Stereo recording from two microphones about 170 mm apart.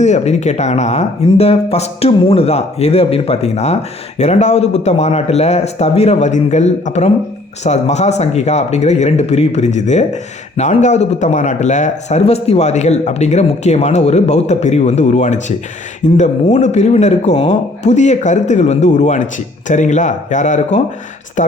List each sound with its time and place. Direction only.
0.0 s a man's voice: 40° left (ahead or behind)